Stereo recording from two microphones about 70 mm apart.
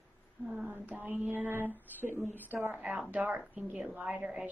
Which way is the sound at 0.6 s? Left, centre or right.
Right.